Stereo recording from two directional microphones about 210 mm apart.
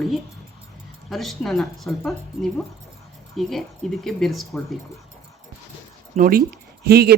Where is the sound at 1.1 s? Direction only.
Centre (ahead or behind).